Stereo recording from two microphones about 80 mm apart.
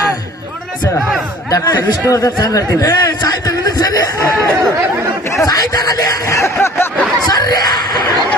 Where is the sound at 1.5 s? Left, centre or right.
Left.